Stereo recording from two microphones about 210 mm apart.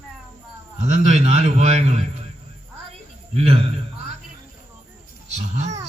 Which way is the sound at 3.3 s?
30° right (ahead or behind).